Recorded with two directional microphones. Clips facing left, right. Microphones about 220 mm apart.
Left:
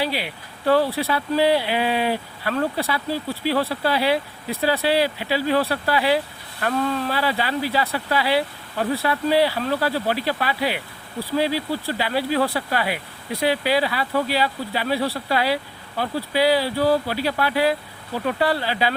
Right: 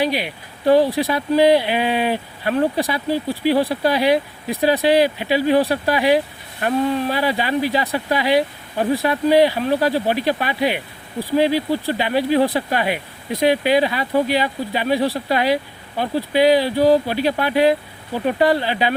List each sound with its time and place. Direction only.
0.0 s speech: 15° right (ahead or behind)